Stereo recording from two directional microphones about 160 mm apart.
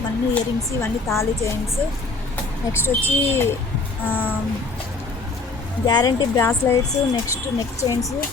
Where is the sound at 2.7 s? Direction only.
15° left (ahead or behind).